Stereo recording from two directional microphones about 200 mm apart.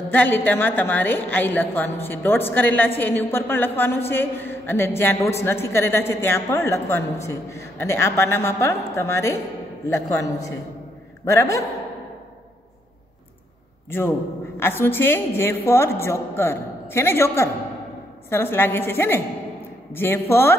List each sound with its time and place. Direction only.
0.1 s a woman's voice: 10° left (ahead or behind)
13.8 s a man's voice: 10° left (ahead or behind)